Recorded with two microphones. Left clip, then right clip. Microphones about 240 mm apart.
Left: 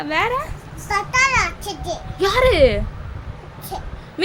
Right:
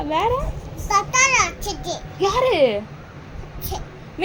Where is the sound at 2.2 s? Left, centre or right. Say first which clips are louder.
Left 3 dB; left.